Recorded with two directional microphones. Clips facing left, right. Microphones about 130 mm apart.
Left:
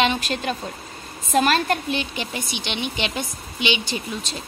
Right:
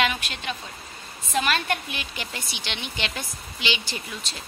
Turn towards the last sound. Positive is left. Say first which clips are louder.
# left 7 dB
turn(degrees=20)  # may be behind; listen again after turning